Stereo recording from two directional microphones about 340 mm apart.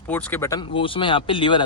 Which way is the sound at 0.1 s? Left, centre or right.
Centre.